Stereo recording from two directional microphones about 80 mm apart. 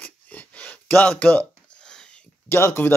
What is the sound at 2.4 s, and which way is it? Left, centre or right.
Speech, left.